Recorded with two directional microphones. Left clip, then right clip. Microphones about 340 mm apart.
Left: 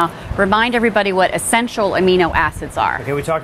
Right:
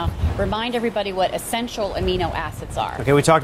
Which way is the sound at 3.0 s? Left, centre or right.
Right.